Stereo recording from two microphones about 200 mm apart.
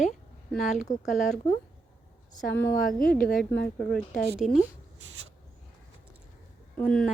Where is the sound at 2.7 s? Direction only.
45° left (ahead or behind).